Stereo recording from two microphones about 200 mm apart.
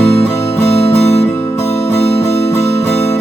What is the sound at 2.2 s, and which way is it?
Music, 30° left (ahead or behind).